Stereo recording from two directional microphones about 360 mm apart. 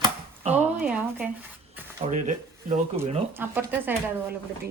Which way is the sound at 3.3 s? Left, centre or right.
Centre.